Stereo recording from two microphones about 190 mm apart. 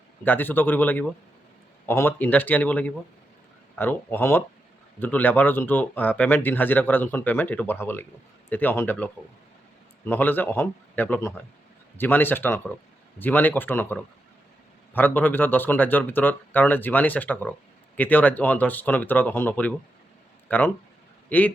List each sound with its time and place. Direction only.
0.3 s a man's voice: 10° left (ahead or behind)